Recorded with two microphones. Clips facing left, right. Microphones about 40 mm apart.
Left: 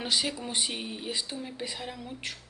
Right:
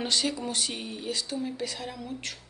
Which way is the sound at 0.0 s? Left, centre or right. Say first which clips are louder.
Right 2 dB; centre.